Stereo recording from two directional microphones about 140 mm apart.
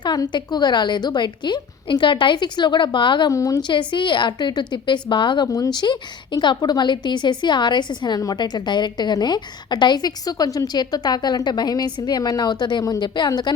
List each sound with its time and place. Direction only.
0.0 s a woman's voice: 30° left (ahead or behind)